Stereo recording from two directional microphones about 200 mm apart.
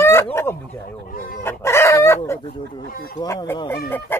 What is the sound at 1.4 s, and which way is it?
Chicken, 10° left (ahead or behind).